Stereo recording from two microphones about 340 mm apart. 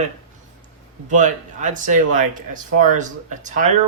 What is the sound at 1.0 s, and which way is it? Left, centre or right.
Speech, right.